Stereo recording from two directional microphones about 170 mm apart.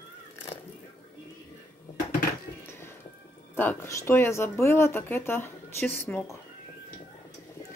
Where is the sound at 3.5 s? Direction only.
15° left (ahead or behind).